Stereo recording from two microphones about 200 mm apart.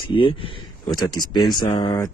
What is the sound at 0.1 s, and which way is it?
Speech, 25° left (ahead or behind).